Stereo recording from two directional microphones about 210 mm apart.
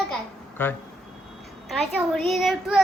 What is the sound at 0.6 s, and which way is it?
Speech, 10° left (ahead or behind).